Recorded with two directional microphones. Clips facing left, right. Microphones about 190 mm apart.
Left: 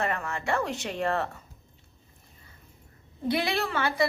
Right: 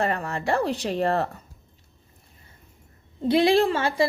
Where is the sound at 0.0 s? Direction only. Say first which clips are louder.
Right 4 dB; 35° right (ahead or behind).